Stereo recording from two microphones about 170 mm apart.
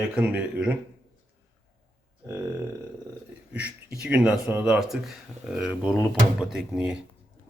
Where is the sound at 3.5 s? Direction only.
5° right (ahead or behind).